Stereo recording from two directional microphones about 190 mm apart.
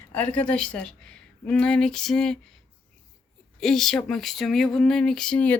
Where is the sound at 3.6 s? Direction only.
Centre (ahead or behind).